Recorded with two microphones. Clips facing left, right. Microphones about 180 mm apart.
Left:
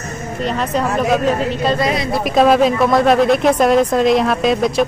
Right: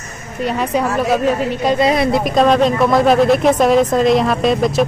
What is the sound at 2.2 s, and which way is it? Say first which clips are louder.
Speech: left 4 dB; 5° left (ahead or behind).